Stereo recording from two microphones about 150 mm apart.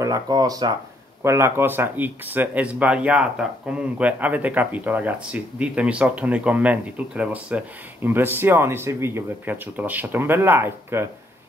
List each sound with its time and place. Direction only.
0.0 s speech: 25° right (ahead or behind)